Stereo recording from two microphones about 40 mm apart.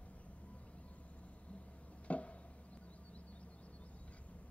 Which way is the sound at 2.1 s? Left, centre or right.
Left.